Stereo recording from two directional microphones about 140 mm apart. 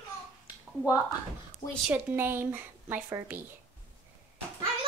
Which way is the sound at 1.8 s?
15° right (ahead or behind).